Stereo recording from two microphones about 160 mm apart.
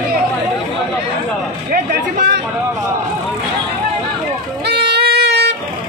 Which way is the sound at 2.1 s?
90° right.